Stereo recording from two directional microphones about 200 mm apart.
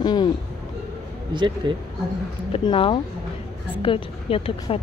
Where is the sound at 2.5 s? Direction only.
25° left (ahead or behind).